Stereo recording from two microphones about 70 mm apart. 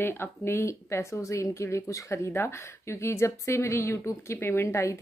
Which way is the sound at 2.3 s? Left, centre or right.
Left.